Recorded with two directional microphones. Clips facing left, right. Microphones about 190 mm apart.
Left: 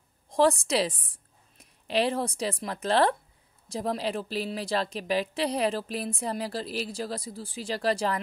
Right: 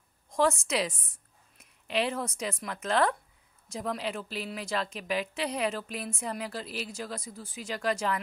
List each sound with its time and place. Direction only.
0.3 s a woman's voice: 35° left (ahead or behind)